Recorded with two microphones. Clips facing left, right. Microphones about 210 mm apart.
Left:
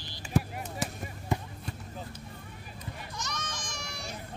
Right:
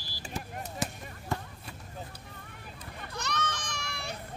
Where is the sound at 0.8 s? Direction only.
Centre (ahead or behind).